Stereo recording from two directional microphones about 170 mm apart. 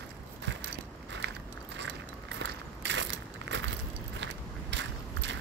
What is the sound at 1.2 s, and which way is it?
Biting, 75° right (ahead or behind).